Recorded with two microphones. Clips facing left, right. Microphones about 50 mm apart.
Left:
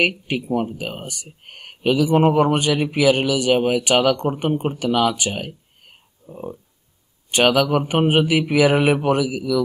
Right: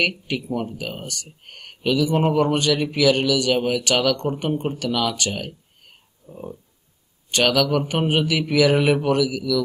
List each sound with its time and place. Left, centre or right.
0.5 s speech: left